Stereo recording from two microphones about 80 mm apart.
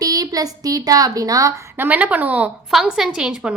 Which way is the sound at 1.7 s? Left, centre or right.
Right.